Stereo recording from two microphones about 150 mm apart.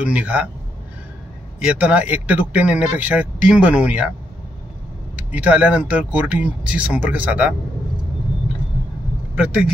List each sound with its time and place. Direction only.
0.0 s a man's voice: 10° right (ahead or behind)
1.6 s a man's voice: 5° right (ahead or behind)
5.1 s a man's voice: 10° right (ahead or behind)
9.3 s speech: 5° right (ahead or behind)